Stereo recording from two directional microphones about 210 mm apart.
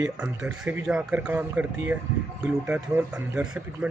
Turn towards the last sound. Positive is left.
turn(degrees=-5)  # may be behind; listen again after turning